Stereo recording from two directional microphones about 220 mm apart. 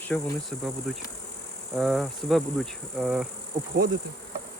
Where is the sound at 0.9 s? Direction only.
Centre (ahead or behind).